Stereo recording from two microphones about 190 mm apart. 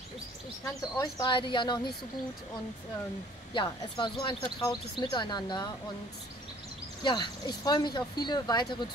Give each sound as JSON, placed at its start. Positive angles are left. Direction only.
{"t": 0.9, "sound": "speech", "side_deg": 20}
{"t": 3.5, "sound": "speech", "side_deg": 25}
{"t": 7.0, "sound": "speech", "side_deg": 25}